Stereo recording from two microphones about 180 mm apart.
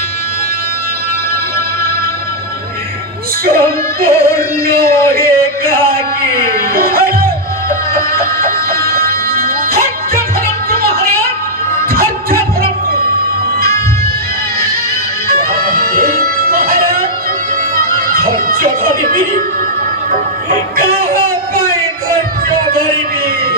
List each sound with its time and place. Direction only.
3.4 s music: 55° right (ahead or behind)
15.4 s music: 55° right (ahead or behind)